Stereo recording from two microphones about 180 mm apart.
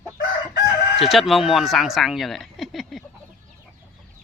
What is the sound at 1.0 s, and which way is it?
Speech, centre (ahead or behind).